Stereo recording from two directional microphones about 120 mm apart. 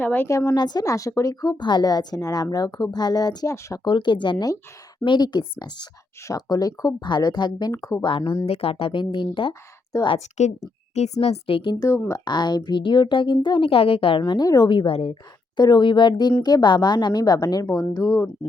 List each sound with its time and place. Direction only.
0.0 s a woman's voice: 15° left (ahead or behind)
0.3 s speech: 25° left (ahead or behind)
3.8 s speech: 40° left (ahead or behind)
7.7 s speech: 25° left (ahead or behind)
8.0 s a woman's voice: 45° left (ahead or behind)
10.4 s a woman's voice: 75° left (ahead or behind); by 11.8 s 45° left (ahead or behind)
11.8 s speech: 25° left (ahead or behind)
12.2 s speech: 35° left (ahead or behind)
14.2 s speech: 35° left (ahead or behind); by 15.2 s 50° left (ahead or behind)
15.5 s speech: 35° left (ahead or behind)